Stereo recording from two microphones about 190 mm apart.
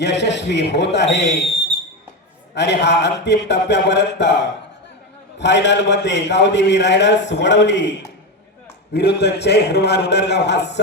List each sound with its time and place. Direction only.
0.0 s a man's voice: 65° left (ahead or behind)
2.6 s a man's voice: 65° left (ahead or behind)